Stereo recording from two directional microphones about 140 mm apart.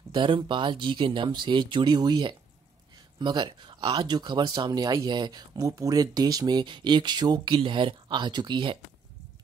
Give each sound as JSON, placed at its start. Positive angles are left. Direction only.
{"t": 0.1, "sound": "speech", "side_deg": -35}